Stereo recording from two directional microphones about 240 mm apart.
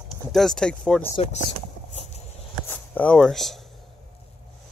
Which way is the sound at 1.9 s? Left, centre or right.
Left.